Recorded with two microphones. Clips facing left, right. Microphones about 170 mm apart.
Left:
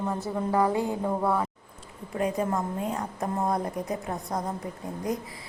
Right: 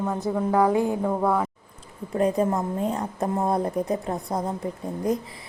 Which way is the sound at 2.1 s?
35° right (ahead or behind).